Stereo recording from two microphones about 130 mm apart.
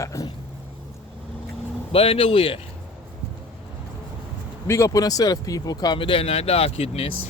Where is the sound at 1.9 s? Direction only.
45° left (ahead or behind).